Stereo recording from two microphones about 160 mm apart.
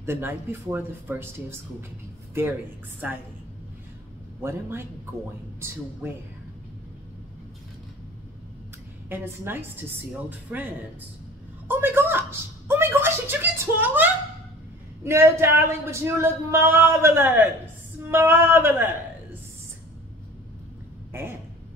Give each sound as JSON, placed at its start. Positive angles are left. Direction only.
{"t": 0.0, "sound": "a man's voice", "side_deg": -15}
{"t": 3.0, "sound": "a man's voice", "side_deg": -10}
{"t": 4.4, "sound": "a man's voice", "side_deg": -15}
{"t": 6.0, "sound": "a man's voice", "side_deg": -15}
{"t": 9.1, "sound": "a man's voice", "side_deg": -15}
{"t": 11.6, "sound": "a sound", "side_deg": -15}
{"t": 15.0, "sound": "a man's voice", "side_deg": -15}
{"t": 21.1, "sound": "speech", "side_deg": -15}